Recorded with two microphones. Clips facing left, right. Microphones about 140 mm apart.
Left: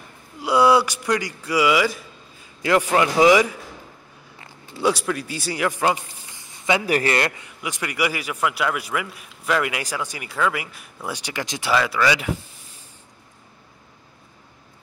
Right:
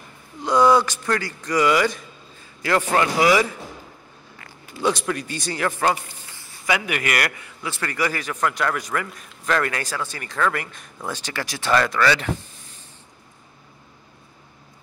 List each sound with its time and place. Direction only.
0.4 s a man's voice: 10° left (ahead or behind)
2.6 s a man's voice: 15° left (ahead or behind)
4.8 s a man's voice: 5° left (ahead or behind)
11.7 s a man's voice: 5° left (ahead or behind)